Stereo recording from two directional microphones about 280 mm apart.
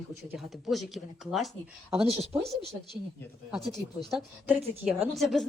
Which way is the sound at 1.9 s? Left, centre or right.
Right.